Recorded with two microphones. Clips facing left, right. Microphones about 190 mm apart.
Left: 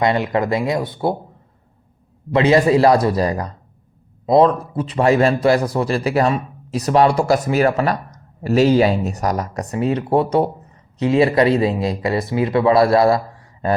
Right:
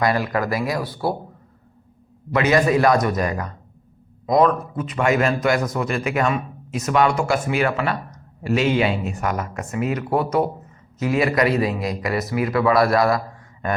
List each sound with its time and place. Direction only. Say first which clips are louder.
0.0 s a man's voice: left 3 dB; 25° left (ahead or behind)
2.3 s a man's voice: left 4 dB; 30° left (ahead or behind)